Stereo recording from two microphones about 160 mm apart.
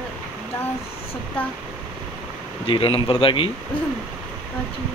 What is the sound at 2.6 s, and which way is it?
Speech, 35° left (ahead or behind).